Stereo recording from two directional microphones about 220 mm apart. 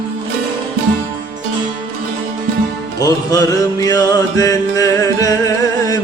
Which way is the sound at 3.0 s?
15° left (ahead or behind).